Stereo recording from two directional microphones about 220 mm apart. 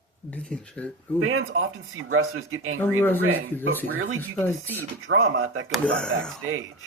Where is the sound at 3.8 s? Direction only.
65° right (ahead or behind).